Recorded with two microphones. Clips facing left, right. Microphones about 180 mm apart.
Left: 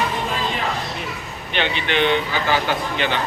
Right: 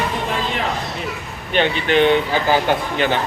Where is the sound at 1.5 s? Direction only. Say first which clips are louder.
Right 5 dB; 40° right (ahead or behind).